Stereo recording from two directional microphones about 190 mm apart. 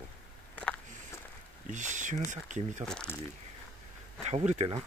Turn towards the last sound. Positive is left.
turn(degrees=-35)  # may be behind; listen again after turning